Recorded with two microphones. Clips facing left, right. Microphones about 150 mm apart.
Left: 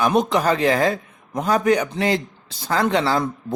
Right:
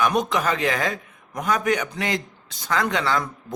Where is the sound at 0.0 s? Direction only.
30° left (ahead or behind).